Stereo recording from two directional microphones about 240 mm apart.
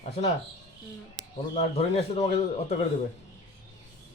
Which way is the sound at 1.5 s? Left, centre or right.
Left.